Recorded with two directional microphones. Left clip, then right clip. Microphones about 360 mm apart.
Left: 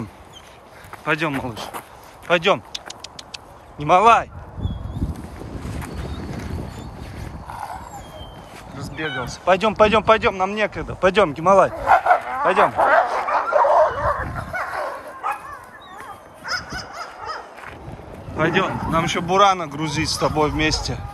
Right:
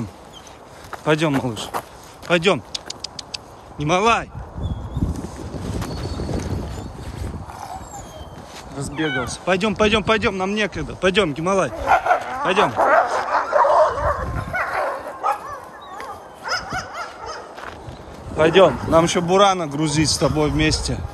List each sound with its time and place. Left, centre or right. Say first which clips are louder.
1.0 s speech: right 3 dB; centre
2.2 s vehicle: even; centre
8.7 s speech: right 3 dB; centre
12.5 s bow-wow: even; left
14.3 s bow-wow: right 3 dB; centre
16.4 s dog: right 3 dB; centre
18.4 s speech: right 6 dB; centre